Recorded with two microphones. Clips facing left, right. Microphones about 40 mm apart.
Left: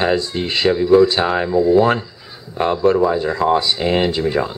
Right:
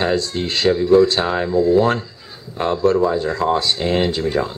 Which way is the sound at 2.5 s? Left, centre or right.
Centre.